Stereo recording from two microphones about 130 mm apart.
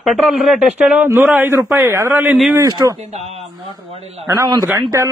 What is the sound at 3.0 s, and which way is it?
A man's voice, 55° right (ahead or behind).